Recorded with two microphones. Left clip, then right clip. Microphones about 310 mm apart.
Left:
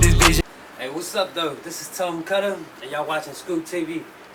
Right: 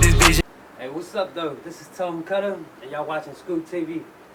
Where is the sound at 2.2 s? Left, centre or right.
Centre.